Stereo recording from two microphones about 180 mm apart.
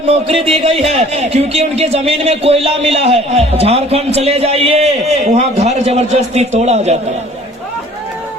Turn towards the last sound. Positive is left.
turn(degrees=-40)  # may be behind; listen again after turning